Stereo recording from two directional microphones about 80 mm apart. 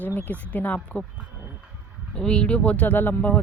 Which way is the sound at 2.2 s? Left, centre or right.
Centre.